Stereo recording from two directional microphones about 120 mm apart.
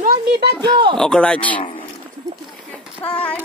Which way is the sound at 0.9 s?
5° left (ahead or behind).